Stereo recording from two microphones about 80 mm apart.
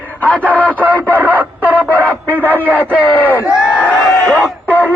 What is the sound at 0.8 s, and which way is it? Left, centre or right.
Radio, right.